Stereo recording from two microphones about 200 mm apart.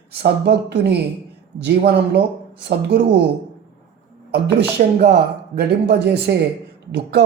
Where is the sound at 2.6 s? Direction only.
55° right (ahead or behind).